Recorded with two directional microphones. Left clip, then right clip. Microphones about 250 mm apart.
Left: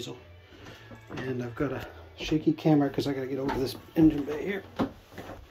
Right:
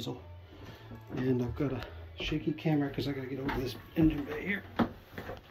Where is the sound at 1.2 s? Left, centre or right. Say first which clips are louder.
Right 2 dB; centre.